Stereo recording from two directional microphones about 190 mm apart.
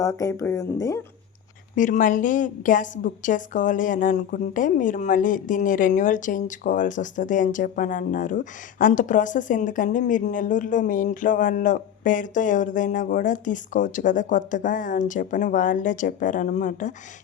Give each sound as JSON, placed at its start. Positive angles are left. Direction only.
{"t": 0.0, "sound": "speech", "side_deg": 15}
{"t": 1.7, "sound": "a woman's voice", "side_deg": 45}